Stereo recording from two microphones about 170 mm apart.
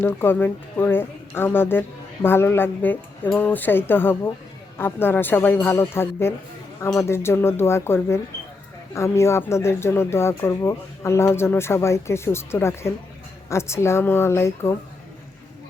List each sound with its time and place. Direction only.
0.0 s speech: 15° left (ahead or behind)